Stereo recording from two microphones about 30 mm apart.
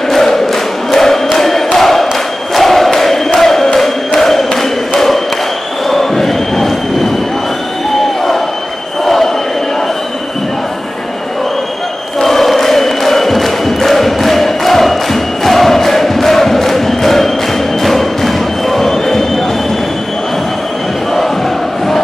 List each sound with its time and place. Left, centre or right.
0.1 s music: centre
2.5 s chant: centre
9.0 s train: centre
12.2 s music: centre
15.4 s chant: centre
17.8 s music: centre